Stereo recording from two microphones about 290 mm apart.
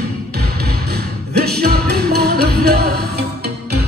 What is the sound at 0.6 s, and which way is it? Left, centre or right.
Music, right.